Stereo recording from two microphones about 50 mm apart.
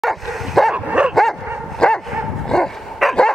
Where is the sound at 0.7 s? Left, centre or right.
Right.